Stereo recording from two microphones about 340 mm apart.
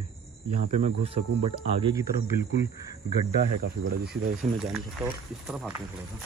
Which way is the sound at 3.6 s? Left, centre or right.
Right.